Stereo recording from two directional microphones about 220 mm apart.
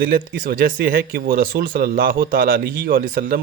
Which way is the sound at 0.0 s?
40° right (ahead or behind).